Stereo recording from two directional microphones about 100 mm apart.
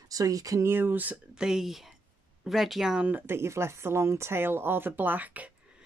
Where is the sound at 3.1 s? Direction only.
25° right (ahead or behind).